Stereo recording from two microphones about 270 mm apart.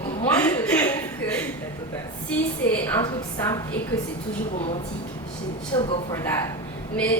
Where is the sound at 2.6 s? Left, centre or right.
Centre.